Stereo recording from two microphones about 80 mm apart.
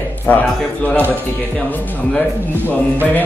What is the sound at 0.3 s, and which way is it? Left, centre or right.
Speech, left.